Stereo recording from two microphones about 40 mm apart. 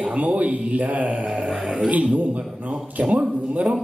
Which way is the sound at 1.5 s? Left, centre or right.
Centre.